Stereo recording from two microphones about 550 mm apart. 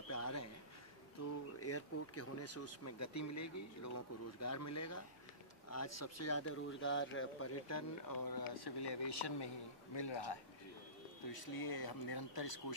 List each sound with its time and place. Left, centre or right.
0.1 s a sound: left
1.6 s a man's voice: left
11.3 s speech: left